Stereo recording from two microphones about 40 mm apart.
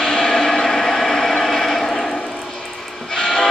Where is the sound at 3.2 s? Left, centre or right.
Centre.